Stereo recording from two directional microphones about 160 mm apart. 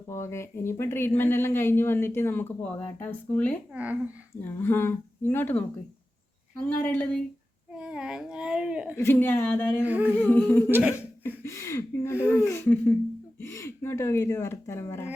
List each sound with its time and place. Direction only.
0.1 s speech: 15° left (ahead or behind)
7.7 s speech: 5° right (ahead or behind)
9.0 s speech: 15° left (ahead or behind)
9.8 s speech: 10° right (ahead or behind)
10.2 s speech: 10° left (ahead or behind)
10.7 s speech: 10° right (ahead or behind)
11.4 s speech: 20° left (ahead or behind)